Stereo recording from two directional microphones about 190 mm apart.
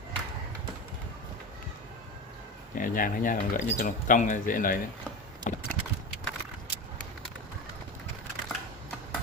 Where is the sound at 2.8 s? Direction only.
45° left (ahead or behind).